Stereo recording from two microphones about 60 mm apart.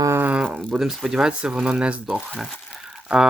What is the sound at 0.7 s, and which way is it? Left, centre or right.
Speech, centre.